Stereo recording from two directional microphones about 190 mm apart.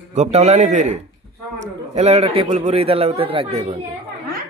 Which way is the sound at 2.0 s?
35° right (ahead or behind).